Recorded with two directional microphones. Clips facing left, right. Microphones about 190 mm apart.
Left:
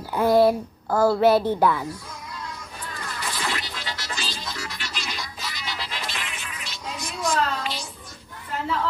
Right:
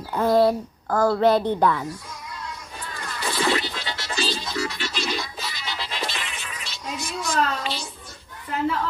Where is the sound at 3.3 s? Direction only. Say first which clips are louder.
Right 8 dB; 30° right (ahead or behind).